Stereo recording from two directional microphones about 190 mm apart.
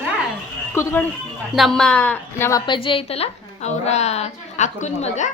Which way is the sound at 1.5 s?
Centre (ahead or behind).